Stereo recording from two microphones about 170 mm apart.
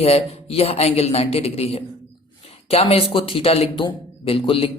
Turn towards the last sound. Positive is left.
turn(degrees=35)  # may be behind; listen again after turning